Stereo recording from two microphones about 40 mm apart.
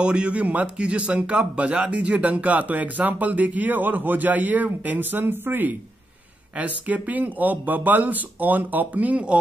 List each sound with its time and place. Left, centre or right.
0.0 s speech: right
6.5 s speech: right